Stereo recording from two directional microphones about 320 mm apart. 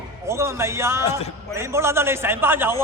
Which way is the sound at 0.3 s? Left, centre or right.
Centre.